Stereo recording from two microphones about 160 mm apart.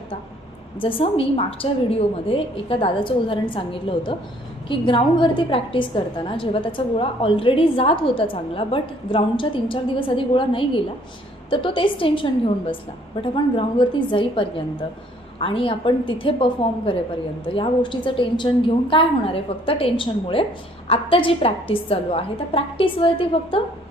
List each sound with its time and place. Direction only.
0.8 s a woman's voice: 35° left (ahead or behind)